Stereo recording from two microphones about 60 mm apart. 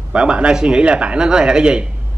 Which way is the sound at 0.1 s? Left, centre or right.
Centre.